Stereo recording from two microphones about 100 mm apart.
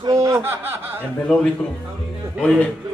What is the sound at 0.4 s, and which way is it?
Speech, 25° right (ahead or behind).